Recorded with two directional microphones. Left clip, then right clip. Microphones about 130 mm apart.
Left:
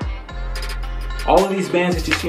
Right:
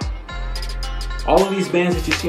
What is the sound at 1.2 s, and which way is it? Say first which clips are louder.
Speech: left 1 dB; 10° left (ahead or behind).